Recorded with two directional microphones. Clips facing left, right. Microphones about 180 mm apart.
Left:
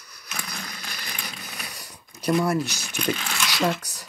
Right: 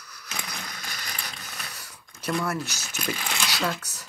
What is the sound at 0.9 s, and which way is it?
Mechanisms, 10° left (ahead or behind).